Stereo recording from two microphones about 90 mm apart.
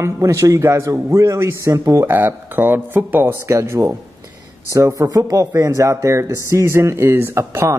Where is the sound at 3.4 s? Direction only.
30° right (ahead or behind).